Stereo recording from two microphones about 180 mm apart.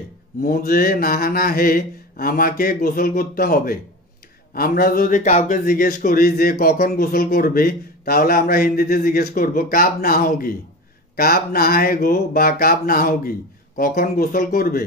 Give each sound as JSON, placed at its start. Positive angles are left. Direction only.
{"t": 0.4, "sound": "a man's voice", "side_deg": 55}